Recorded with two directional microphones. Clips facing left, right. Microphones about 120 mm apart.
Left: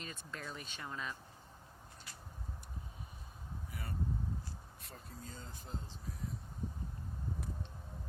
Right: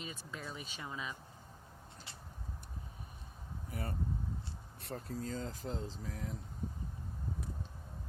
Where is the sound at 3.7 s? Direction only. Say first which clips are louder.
Right 7 dB; 45° right (ahead or behind).